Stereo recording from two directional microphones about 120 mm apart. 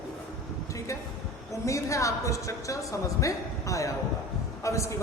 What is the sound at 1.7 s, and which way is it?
A woman's voice, 25° left (ahead or behind).